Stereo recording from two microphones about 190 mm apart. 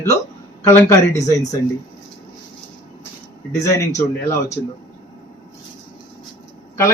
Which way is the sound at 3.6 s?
15° left (ahead or behind).